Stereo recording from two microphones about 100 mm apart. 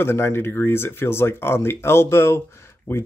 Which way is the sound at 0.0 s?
25° left (ahead or behind).